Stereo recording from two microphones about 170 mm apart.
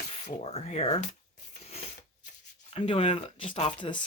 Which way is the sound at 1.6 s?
35° left (ahead or behind).